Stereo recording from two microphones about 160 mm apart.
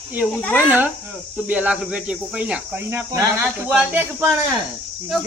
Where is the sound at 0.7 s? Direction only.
10° right (ahead or behind).